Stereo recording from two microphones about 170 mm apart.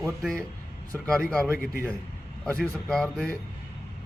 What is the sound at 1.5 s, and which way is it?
Speech, 60° left (ahead or behind).